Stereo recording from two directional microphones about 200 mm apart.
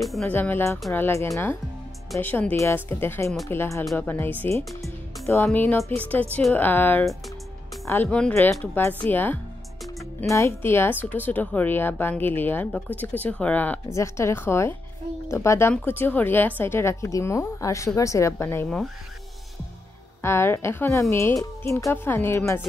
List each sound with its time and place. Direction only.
0.0 s speech: centre (ahead or behind)
20.2 s speech: 10° left (ahead or behind)